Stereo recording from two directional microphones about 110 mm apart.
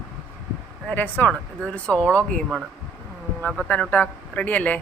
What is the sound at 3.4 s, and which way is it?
Speech, 10° left (ahead or behind).